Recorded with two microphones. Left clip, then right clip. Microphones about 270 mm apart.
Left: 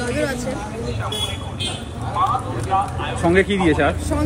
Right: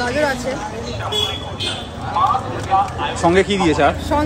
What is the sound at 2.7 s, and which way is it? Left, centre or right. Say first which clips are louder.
Speech: right 4 dB; right.